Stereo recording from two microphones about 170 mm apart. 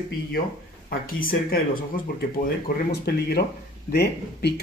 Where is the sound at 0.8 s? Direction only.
60° left (ahead or behind).